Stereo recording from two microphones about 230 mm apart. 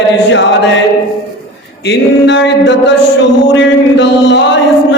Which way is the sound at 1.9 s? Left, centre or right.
Left.